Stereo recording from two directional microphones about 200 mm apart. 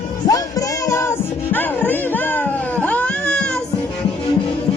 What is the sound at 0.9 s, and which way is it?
Music, 15° left (ahead or behind).